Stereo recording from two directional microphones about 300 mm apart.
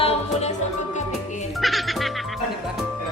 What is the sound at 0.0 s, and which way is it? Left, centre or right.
Music, left.